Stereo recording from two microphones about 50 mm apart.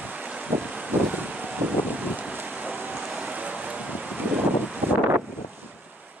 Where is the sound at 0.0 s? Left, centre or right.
Right.